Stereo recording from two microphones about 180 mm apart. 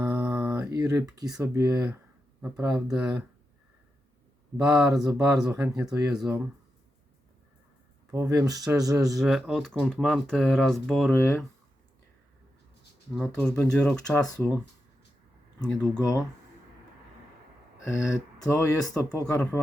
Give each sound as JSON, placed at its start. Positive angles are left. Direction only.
{"t": 0.0, "sound": "mantra", "side_deg": -15}
{"t": 1.4, "sound": "speech", "side_deg": -15}
{"t": 4.5, "sound": "speech", "side_deg": -20}
{"t": 8.1, "sound": "speech", "side_deg": -15}
{"t": 9.1, "sound": "speech", "side_deg": 0}
{"t": 11.1, "sound": "speech", "side_deg": 15}
{"t": 13.1, "sound": "speech", "side_deg": 5}
{"t": 16.0, "sound": "speech", "side_deg": 15}
{"t": 17.8, "sound": "speech", "side_deg": 15}
{"t": 19.2, "sound": "speech", "side_deg": 5}